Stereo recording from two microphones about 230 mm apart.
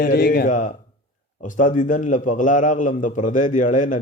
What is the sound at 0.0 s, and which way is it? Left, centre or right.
Speech, left.